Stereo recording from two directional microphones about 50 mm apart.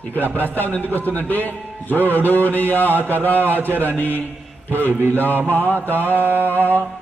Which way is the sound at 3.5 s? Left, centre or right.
Right.